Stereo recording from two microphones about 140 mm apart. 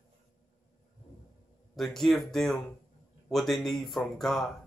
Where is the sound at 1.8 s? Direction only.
Centre (ahead or behind).